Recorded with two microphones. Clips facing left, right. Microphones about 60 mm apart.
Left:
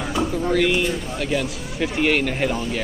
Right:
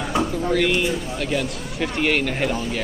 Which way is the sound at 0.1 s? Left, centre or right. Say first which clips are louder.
Even; centre.